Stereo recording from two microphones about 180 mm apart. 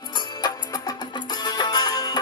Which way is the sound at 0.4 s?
20° left (ahead or behind).